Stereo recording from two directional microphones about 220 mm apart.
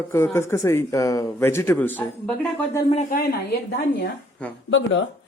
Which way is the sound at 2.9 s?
35° left (ahead or behind).